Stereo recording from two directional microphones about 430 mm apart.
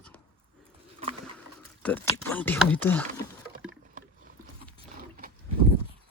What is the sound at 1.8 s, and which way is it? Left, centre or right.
Speech, centre.